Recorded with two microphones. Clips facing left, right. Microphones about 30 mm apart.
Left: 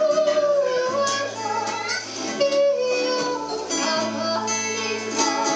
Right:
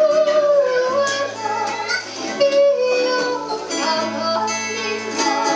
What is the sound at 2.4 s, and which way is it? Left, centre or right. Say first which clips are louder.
Music: right 5 dB; centre.